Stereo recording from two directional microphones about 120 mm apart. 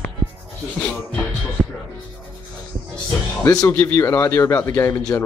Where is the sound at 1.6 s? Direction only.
5° right (ahead or behind).